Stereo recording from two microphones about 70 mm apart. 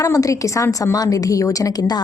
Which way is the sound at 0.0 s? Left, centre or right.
Left.